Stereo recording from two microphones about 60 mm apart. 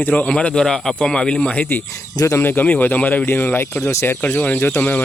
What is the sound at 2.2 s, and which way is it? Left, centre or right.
Speech, left.